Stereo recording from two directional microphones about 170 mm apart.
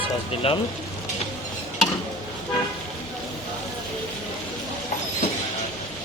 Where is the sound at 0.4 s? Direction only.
35° left (ahead or behind).